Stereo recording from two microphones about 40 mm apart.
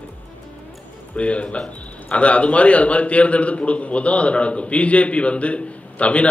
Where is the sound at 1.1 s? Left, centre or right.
Left.